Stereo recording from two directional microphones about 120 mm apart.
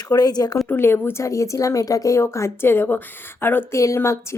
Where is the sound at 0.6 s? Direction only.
20° left (ahead or behind).